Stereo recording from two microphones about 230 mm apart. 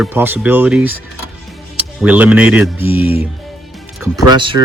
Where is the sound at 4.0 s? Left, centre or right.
Centre.